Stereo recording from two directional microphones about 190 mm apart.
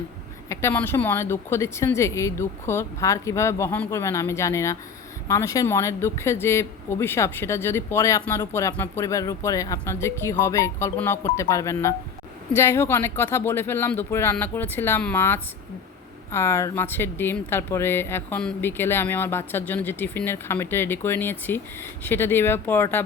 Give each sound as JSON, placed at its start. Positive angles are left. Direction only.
{"t": 0.4, "sound": "speech", "side_deg": 15}